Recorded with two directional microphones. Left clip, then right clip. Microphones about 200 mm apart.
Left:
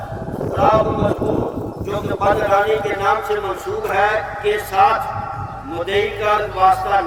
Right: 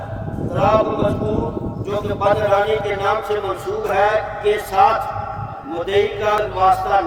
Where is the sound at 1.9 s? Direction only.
50° right (ahead or behind).